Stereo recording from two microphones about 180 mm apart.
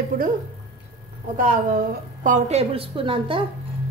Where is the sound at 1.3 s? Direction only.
45° right (ahead or behind).